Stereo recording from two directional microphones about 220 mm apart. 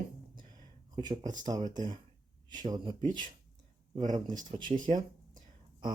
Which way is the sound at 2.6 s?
20° right (ahead or behind).